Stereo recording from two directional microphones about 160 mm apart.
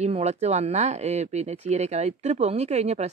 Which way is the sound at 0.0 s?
45° right (ahead or behind).